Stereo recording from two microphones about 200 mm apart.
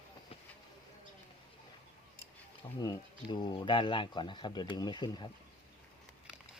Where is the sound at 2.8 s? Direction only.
20° left (ahead or behind).